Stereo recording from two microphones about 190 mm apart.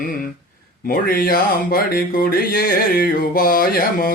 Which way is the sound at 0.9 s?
50° left (ahead or behind).